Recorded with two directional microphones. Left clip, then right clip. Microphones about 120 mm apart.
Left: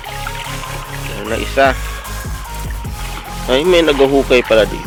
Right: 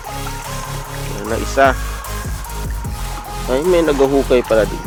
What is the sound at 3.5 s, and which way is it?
Speech, centre (ahead or behind).